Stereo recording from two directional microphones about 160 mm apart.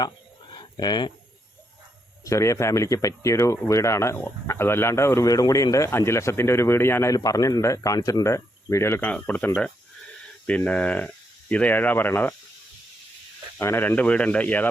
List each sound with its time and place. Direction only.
0.5 s a sound: 25° left (ahead or behind)
2.2 s speech: 20° left (ahead or behind)
13.6 s speech: 15° left (ahead or behind)